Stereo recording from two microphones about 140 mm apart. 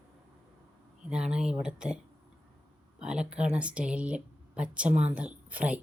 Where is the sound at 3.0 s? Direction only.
5° right (ahead or behind).